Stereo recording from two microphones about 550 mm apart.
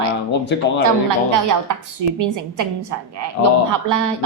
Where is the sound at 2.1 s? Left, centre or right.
Right.